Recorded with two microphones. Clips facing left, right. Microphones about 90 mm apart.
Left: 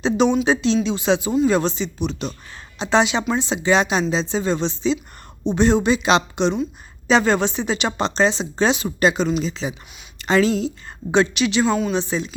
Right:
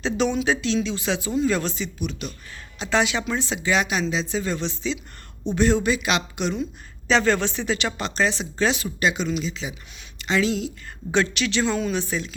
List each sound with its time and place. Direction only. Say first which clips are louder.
0.0 s a woman's voice: left 5 dB; 20° left (ahead or behind)
7.1 s a woman's voice: left 3 dB; 20° left (ahead or behind)
9.0 s a woman's voice: left 5 dB; 40° left (ahead or behind)
11.1 s a woman's voice: left 5 dB; 20° left (ahead or behind)
11.6 s a woman's voice: left 4 dB; 5° left (ahead or behind)
11.9 s a woman's voice: left 4 dB; 20° left (ahead or behind)